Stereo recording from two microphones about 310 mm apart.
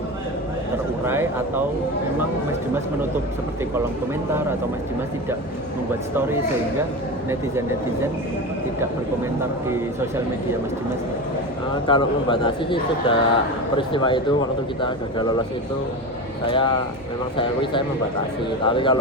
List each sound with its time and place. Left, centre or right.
1.0 s speech: centre
11.7 s a man's voice: centre
16.5 s a man's voice: centre